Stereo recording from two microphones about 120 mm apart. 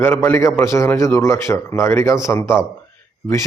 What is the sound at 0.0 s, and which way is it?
A man's voice, 20° left (ahead or behind).